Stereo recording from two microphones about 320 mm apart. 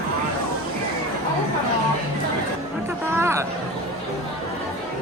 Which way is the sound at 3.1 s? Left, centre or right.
Centre.